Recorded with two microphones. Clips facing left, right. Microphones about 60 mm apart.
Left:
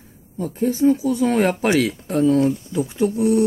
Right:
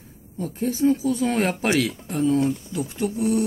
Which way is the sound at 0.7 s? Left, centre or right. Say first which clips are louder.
Left 3 dB; centre.